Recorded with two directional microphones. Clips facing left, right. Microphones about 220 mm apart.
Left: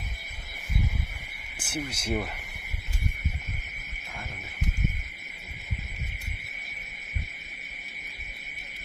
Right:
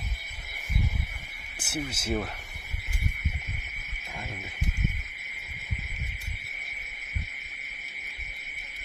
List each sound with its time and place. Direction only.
1.6 s speech: 5° right (ahead or behind)